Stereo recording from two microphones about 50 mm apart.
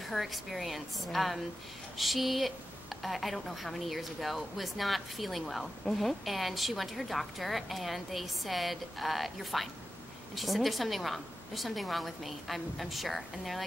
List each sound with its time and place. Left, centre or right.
0.0 s a woman's voice: centre